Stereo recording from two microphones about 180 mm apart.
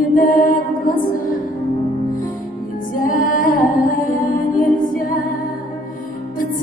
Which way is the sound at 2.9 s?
50° left (ahead or behind).